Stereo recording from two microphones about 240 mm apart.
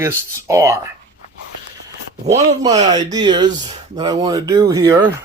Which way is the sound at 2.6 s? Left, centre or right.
Centre.